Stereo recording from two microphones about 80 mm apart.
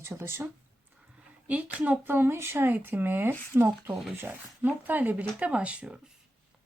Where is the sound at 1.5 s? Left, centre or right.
Centre.